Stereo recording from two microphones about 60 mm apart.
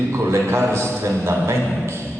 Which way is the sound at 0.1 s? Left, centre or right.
Right.